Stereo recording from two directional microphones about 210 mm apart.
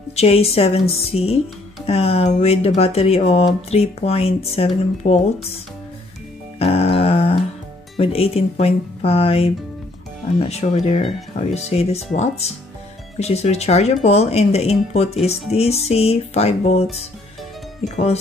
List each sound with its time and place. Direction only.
0.1 s speech: 30° left (ahead or behind)
6.6 s music: 30° left (ahead or behind)
8.0 s speech: 30° left (ahead or behind)
17.8 s speech: 30° left (ahead or behind)